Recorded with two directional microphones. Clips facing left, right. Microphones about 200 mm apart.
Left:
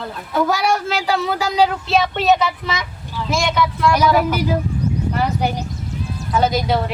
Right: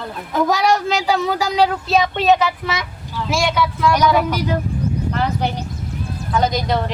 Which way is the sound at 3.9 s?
5° left (ahead or behind).